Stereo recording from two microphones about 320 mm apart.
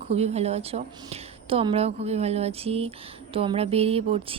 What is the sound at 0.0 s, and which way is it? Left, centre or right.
A woman's voice, centre.